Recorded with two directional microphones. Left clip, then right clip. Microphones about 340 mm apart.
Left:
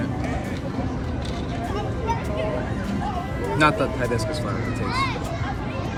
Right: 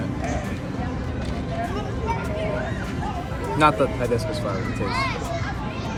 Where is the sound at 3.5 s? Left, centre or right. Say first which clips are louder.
Right 1 dB; centre.